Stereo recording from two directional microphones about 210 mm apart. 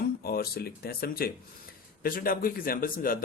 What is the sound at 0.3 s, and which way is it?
Speech, 45° left (ahead or behind).